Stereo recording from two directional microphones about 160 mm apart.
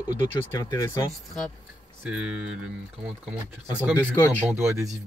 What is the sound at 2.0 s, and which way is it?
Speech, 5° right (ahead or behind).